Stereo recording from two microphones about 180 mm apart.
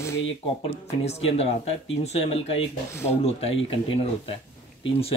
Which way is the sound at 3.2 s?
35° left (ahead or behind).